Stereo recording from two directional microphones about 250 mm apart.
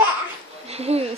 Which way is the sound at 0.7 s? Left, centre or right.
Right.